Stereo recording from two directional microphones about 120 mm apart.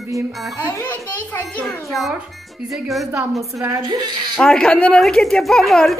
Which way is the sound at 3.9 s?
40° right (ahead or behind).